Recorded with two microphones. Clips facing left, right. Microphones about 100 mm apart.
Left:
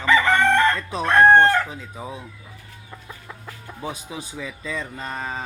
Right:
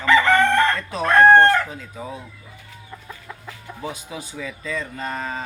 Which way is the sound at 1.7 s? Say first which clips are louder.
Right 1 dB; 20° left (ahead or behind).